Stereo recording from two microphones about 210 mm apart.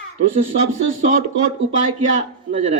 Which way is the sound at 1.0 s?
35° right (ahead or behind).